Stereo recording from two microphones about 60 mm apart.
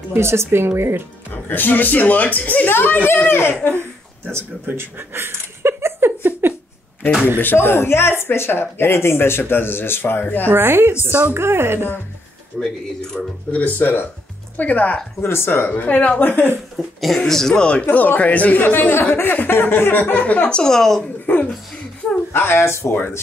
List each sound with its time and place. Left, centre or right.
0.1 s speech: right
1.3 s speech: left
4.3 s a sound: right
7.3 s speech: left
10.5 s speech: right
12.5 s speech: centre
13.5 s speech: left
15.1 s speech: left
16.7 s speech: centre
17.9 s speech: left
18.6 s speech: left; by 21.0 s centre
22.3 s speech: left